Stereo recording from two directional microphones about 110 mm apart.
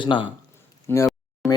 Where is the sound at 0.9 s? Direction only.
25° left (ahead or behind).